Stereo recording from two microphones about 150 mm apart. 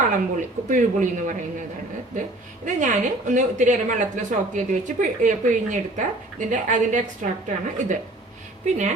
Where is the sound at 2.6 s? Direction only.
55° right (ahead or behind).